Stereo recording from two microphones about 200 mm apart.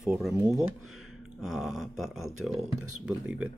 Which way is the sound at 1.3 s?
Centre (ahead or behind).